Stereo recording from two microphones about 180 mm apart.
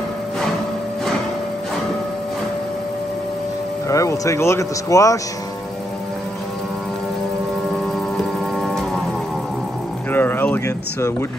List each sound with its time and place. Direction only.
3.9 s speech: 15° left (ahead or behind)
8.5 s organ: centre (ahead or behind)
10.1 s a sound: 10° left (ahead or behind)